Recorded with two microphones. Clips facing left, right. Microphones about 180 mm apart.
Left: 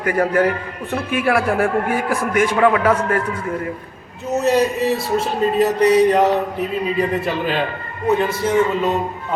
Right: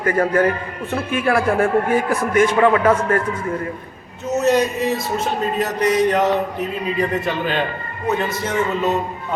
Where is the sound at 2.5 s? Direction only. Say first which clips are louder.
Left 2 dB; centre (ahead or behind).